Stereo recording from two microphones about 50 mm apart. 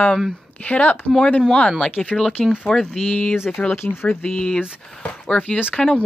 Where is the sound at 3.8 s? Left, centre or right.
Left.